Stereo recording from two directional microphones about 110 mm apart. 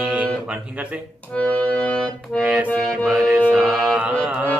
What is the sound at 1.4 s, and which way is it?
Music, 10° left (ahead or behind).